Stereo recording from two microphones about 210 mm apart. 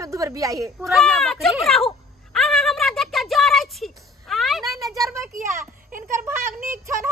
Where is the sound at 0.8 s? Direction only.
Centre (ahead or behind).